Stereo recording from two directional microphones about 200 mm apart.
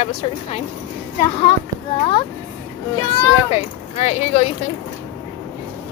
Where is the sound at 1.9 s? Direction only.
25° left (ahead or behind).